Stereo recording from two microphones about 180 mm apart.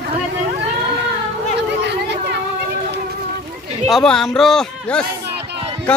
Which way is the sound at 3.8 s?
Centre (ahead or behind).